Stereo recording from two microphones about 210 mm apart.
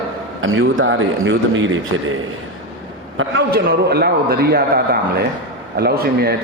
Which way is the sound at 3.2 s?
55° right (ahead or behind).